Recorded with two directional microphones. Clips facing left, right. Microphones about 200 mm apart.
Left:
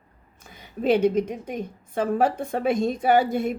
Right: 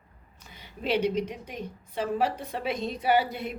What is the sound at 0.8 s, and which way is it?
A woman's voice, 50° left (ahead or behind).